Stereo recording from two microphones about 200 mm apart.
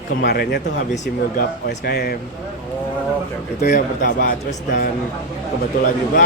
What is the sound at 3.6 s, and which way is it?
Speech, 50° left (ahead or behind).